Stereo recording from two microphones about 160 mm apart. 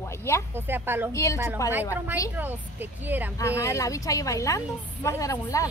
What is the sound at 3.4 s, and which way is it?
A woman's voice, 20° left (ahead or behind).